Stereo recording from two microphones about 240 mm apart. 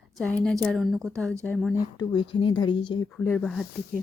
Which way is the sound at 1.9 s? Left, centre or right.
Centre.